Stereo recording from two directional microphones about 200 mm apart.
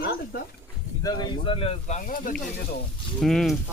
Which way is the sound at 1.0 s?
25° left (ahead or behind).